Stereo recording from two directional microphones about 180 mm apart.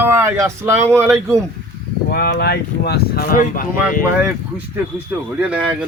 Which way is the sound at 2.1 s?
55° left (ahead or behind).